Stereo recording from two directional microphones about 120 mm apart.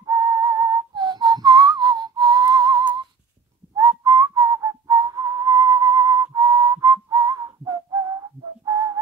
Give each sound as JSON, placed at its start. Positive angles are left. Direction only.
{"t": 0.0, "sound": "whistling", "side_deg": -30}
{"t": 4.0, "sound": "whistling", "side_deg": -30}